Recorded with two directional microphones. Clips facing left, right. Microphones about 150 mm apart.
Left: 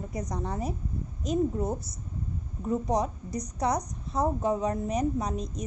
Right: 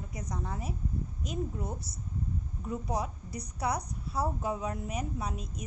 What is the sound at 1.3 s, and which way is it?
A woman's voice, 40° left (ahead or behind).